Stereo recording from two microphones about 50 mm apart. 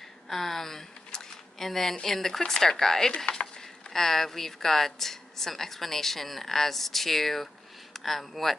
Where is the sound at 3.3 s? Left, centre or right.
Left.